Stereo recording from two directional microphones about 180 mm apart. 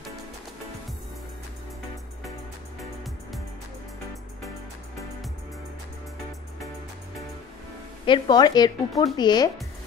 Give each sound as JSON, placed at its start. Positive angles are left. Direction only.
{"t": 8.0, "sound": "speech", "side_deg": 25}